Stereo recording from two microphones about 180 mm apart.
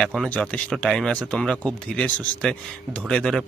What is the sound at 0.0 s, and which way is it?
Speech, centre (ahead or behind).